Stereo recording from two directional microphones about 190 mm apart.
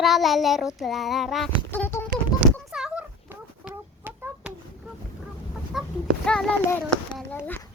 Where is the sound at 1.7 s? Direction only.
10° left (ahead or behind).